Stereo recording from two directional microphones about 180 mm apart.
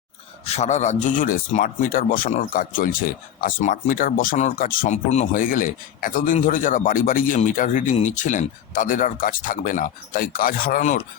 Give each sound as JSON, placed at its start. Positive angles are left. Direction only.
{"t": 0.4, "sound": "speech", "side_deg": 40}